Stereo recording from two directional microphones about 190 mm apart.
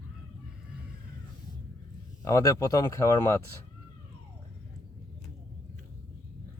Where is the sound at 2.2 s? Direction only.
15° left (ahead or behind).